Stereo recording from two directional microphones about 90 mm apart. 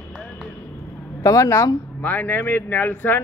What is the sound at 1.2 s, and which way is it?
Speech, 40° left (ahead or behind).